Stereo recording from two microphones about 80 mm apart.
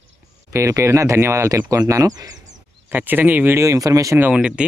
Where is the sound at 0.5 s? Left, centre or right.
Right.